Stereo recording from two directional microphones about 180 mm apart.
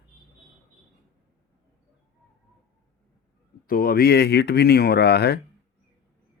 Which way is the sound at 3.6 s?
55° left (ahead or behind).